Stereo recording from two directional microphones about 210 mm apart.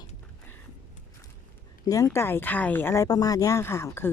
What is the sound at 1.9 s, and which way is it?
Speech, 15° left (ahead or behind).